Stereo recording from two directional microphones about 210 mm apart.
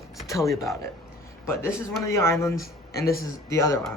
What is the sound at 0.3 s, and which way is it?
Speech, 15° left (ahead or behind).